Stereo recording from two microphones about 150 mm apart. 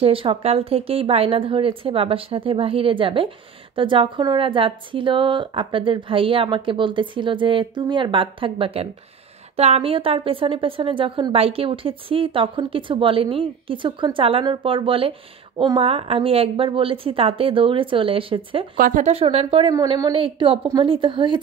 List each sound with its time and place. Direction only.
0.0 s speech: 35° right (ahead or behind)
18.8 s speech: 60° right (ahead or behind)
19.1 s speech: 40° right (ahead or behind)
19.7 s a woman's voice: 25° right (ahead or behind)
20.1 s speech: 35° right (ahead or behind)